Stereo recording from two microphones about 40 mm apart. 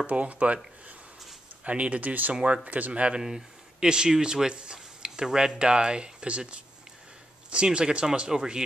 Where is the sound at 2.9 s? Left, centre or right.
Right.